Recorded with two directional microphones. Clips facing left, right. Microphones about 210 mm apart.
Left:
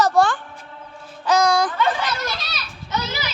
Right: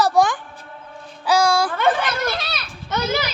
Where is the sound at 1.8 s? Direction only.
55° right (ahead or behind).